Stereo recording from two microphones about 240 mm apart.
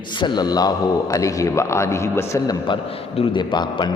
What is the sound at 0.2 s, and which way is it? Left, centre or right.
A man's voice, centre.